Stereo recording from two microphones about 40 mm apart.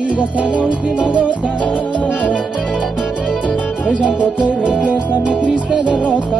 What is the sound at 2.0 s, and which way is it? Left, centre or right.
Music, left.